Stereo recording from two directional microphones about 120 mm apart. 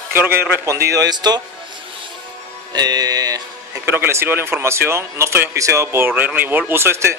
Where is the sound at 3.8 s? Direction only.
20° right (ahead or behind).